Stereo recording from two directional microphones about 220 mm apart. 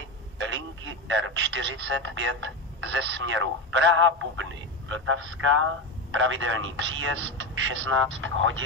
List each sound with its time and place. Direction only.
0.4 s telephone: 60° right (ahead or behind)
2.0 s speech: 60° right (ahead or behind)